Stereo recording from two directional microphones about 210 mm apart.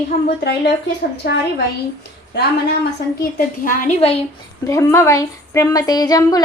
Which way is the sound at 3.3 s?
40° left (ahead or behind).